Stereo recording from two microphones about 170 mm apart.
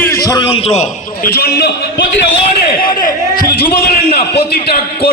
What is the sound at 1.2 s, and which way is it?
Speech, 65° left (ahead or behind).